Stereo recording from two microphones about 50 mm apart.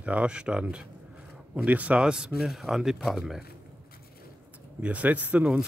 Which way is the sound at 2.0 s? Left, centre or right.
Centre.